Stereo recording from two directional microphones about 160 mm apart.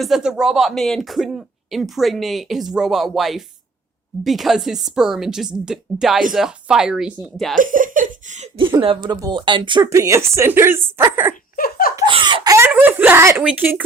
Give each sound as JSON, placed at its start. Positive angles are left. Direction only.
{"t": 0.0, "sound": "speech", "side_deg": -5}
{"t": 7.5, "sound": "speech", "side_deg": -55}
{"t": 8.5, "sound": "speech", "side_deg": -30}
{"t": 9.8, "sound": "a woman's voice", "side_deg": -20}
{"t": 11.5, "sound": "laughter", "side_deg": 65}
{"t": 12.0, "sound": "laughter", "side_deg": -30}
{"t": 12.5, "sound": "a sound", "side_deg": -10}
{"t": 13.4, "sound": "a woman's voice", "side_deg": -10}